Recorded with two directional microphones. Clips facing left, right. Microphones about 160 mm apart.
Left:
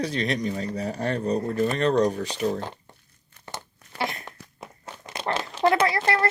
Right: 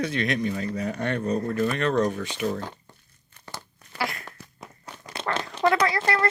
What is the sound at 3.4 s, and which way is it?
Crumpling, 20° left (ahead or behind).